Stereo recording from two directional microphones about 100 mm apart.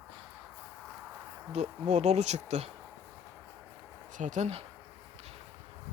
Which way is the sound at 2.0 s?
90° right.